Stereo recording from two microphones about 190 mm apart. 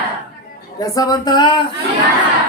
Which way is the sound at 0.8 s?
20° left (ahead or behind).